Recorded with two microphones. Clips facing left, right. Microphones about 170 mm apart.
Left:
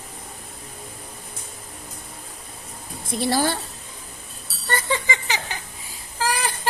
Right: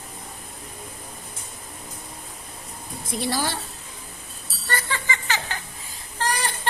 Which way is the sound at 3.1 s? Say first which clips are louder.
Left 4 dB; 50° left (ahead or behind).